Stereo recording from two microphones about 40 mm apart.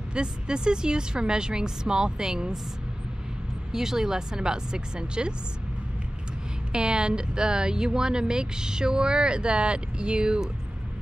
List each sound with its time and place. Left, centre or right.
0.1 s speech: right
3.7 s speech: centre
6.7 s speech: right